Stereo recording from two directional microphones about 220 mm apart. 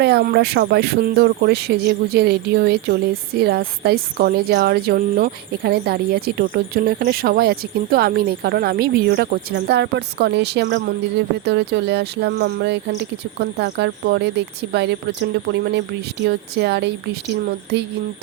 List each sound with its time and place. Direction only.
0.0 s speech: 45° right (ahead or behind)